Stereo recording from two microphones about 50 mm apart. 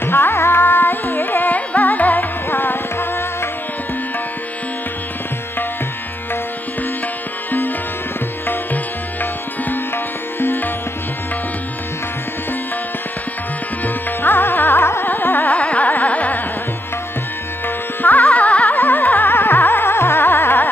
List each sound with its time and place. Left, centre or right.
0.0 s carnatic music: left
1.7 s music: left
10.4 s music: left
13.8 s carnatic music: left
15.5 s carnatic music: left
18.0 s carnatic music: left